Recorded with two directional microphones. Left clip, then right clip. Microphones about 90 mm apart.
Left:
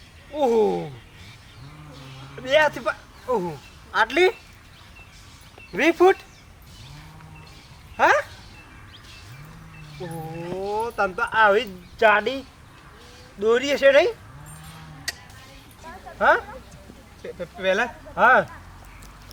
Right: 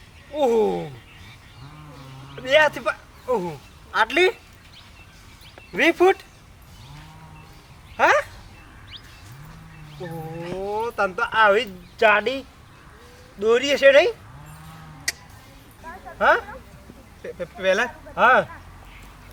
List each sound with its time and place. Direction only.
0.3 s speech: centre (ahead or behind)
2.4 s a man's voice: centre (ahead or behind)
5.7 s speech: centre (ahead or behind)
7.9 s a sound: centre (ahead or behind)
10.0 s a sound: 5° right (ahead or behind)
10.8 s speech: centre (ahead or behind)
15.1 s music: 40° right (ahead or behind)
16.1 s speech: centre (ahead or behind)